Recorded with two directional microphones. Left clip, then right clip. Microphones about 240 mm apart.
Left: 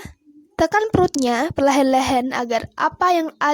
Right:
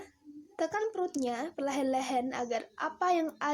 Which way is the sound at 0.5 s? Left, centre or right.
Left.